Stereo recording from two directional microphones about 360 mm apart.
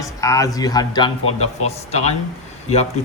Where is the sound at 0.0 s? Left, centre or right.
Centre.